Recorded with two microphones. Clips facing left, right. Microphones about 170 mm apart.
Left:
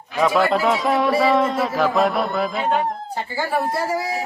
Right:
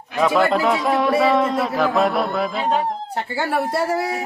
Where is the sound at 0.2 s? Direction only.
Centre (ahead or behind).